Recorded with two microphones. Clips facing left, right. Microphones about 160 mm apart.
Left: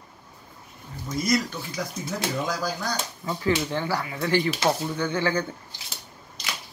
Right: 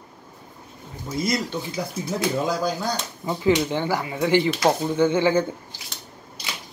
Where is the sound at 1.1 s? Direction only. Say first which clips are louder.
Even; 25° right (ahead or behind).